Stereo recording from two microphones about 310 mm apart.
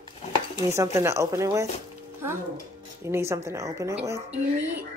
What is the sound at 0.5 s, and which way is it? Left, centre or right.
A woman's voice, centre.